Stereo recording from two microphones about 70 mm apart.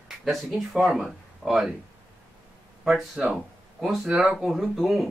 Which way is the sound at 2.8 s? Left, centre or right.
Centre.